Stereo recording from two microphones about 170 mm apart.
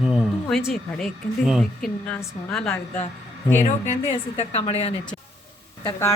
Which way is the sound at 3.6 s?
45° left (ahead or behind).